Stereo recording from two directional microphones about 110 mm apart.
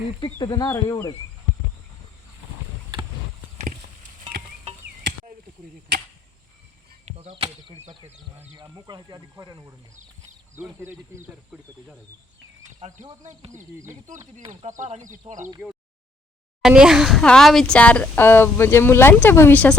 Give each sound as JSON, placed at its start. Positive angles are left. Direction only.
{"t": 0.3, "sound": "speech", "side_deg": 40}
{"t": 7.0, "sound": "chop", "side_deg": -70}
{"t": 8.5, "sound": "speech", "side_deg": -40}
{"t": 10.6, "sound": "speech", "side_deg": -20}
{"t": 12.8, "sound": "speech", "side_deg": -90}
{"t": 13.7, "sound": "speech", "side_deg": -25}
{"t": 14.5, "sound": "speech", "side_deg": -90}
{"t": 15.3, "sound": "speech", "side_deg": -50}
{"t": 16.6, "sound": "a sound", "side_deg": -5}
{"t": 17.2, "sound": "speech", "side_deg": 5}